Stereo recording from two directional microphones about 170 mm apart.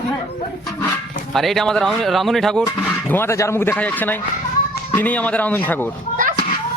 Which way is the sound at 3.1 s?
15° left (ahead or behind).